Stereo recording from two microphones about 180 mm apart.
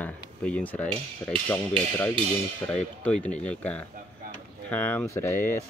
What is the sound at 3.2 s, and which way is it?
Speech, 5° left (ahead or behind).